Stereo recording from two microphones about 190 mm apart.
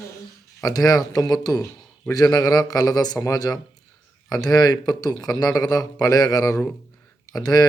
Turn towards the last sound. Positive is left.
turn(degrees=20)  # may be behind; listen again after turning